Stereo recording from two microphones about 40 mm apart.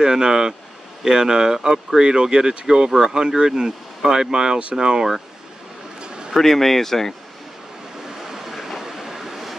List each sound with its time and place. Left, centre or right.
0.0 s speech: centre
5.9 s a sound: right
6.3 s speech: centre
8.3 s vehicle: centre